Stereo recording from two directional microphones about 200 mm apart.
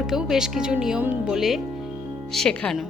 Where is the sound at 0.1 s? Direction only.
5° right (ahead or behind).